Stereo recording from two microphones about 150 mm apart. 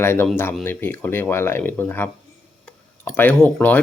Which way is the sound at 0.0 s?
15° left (ahead or behind).